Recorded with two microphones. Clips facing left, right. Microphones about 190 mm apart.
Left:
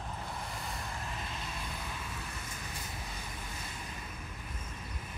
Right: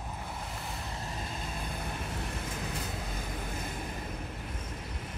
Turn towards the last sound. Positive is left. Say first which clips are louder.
# right 7 dB
turn(degrees=-55)  # may be behind; listen again after turning